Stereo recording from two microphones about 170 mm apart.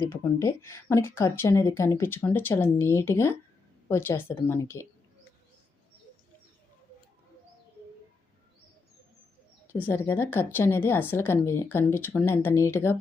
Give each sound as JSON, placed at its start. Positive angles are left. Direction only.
{"t": 0.0, "sound": "speech", "side_deg": 15}
{"t": 9.7, "sound": "speech", "side_deg": 10}